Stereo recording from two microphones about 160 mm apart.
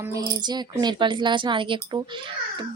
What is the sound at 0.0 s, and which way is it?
Speech, 20° right (ahead or behind).